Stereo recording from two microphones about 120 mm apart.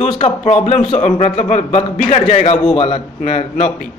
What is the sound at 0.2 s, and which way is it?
A man's voice, 65° left (ahead or behind).